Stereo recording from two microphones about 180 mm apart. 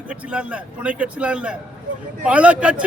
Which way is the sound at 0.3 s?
5° right (ahead or behind).